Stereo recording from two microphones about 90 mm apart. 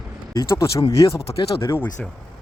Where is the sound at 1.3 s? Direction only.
85° left.